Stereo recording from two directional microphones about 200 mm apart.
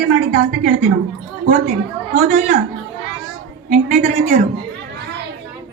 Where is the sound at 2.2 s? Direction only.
35° right (ahead or behind).